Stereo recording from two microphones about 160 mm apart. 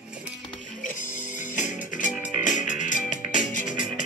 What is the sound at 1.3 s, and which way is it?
Music, 50° left (ahead or behind).